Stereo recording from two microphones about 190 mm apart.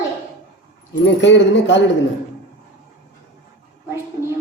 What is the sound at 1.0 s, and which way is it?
Speech, 70° left (ahead or behind).